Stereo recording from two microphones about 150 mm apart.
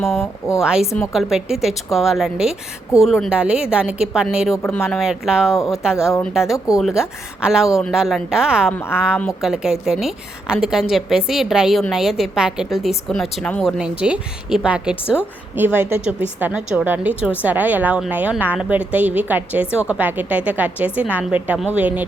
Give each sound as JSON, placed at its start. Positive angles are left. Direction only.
{"t": 0.2, "sound": "a woman's voice", "side_deg": 20}
{"t": 0.6, "sound": "a woman's voice", "side_deg": -5}
{"t": 4.5, "sound": "speech", "side_deg": 15}
{"t": 4.9, "sound": "a woman's voice", "side_deg": -5}